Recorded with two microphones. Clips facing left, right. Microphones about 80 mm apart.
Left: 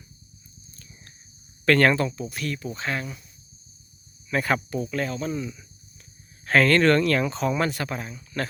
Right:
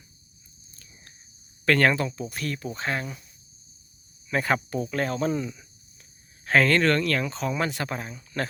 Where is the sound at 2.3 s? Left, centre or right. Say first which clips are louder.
Left 1 dB; right.